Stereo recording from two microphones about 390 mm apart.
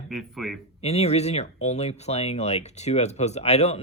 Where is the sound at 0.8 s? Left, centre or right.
Centre.